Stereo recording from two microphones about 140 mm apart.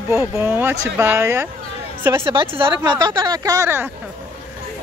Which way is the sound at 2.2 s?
40° right (ahead or behind).